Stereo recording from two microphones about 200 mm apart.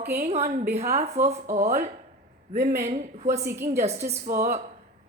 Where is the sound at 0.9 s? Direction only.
35° right (ahead or behind).